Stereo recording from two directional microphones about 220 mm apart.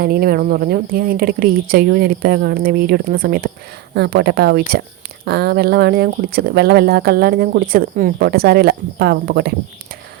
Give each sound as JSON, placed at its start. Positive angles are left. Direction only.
{"t": 0.0, "sound": "a woman's voice", "side_deg": -45}